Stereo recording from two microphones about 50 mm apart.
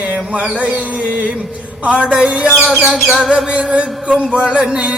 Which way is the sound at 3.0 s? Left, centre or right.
Centre.